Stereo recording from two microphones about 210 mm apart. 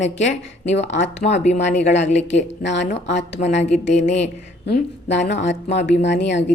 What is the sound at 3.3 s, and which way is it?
Speech, 35° left (ahead or behind).